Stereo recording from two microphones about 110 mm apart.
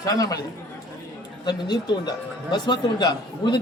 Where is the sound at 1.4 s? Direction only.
40° left (ahead or behind).